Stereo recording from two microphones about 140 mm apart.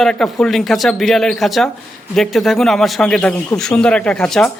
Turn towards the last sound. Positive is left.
turn(degrees=5)  # may be behind; listen again after turning